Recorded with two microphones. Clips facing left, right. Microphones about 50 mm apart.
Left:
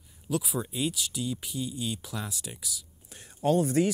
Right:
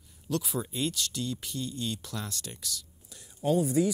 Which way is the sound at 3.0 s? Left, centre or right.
Left.